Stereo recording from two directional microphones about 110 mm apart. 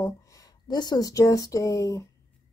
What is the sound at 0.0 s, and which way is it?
A woman's voice, 30° left (ahead or behind).